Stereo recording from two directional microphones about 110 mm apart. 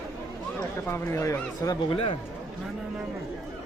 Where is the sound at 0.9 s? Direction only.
25° left (ahead or behind).